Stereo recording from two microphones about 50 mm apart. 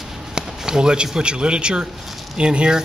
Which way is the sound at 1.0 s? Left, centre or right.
Centre.